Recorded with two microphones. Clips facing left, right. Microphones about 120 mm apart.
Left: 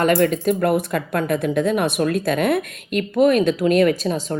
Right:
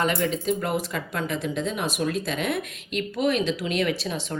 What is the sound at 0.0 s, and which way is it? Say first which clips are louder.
Speech: left 8 dB; 50° left (ahead or behind).